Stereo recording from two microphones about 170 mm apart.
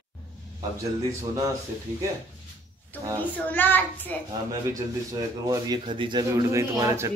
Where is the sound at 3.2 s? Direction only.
10° left (ahead or behind).